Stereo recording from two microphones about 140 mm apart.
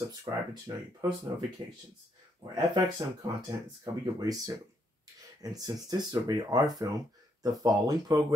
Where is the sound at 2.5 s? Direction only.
25° right (ahead or behind).